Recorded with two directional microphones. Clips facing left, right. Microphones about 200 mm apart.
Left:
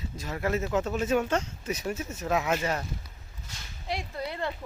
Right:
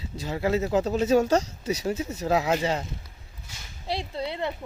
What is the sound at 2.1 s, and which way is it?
Speech, 35° right (ahead or behind).